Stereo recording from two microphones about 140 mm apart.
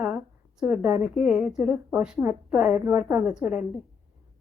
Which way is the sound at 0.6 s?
5° right (ahead or behind).